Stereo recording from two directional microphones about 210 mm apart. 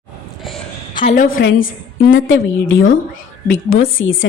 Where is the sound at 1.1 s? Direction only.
45° left (ahead or behind).